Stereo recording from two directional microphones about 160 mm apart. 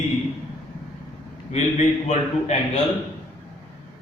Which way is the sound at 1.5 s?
45° left (ahead or behind).